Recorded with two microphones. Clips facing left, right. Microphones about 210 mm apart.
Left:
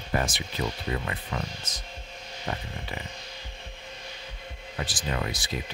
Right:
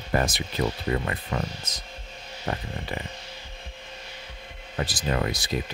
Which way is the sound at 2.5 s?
50° right (ahead or behind).